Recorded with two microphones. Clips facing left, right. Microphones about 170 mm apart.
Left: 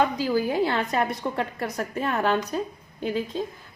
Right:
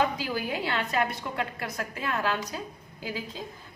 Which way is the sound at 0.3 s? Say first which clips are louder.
Left 10 dB; 30° left (ahead or behind).